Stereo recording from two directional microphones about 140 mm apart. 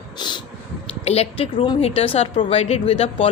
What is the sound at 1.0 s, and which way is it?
Speech, 45° left (ahead or behind).